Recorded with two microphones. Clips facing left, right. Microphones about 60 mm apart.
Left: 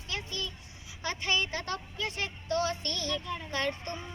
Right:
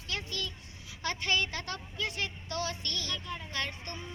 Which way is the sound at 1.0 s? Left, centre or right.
Left.